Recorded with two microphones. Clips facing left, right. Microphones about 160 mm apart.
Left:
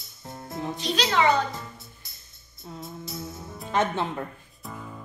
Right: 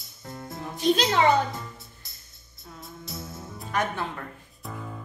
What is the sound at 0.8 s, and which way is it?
Speech, 50° right (ahead or behind).